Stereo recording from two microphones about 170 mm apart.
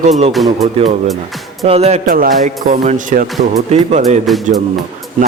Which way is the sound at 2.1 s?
55° right (ahead or behind).